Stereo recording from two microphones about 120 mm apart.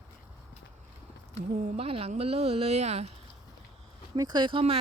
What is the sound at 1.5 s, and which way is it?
Speech, 90° right.